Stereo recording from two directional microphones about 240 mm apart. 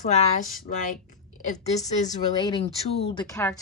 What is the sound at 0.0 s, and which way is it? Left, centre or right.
A woman's voice, left.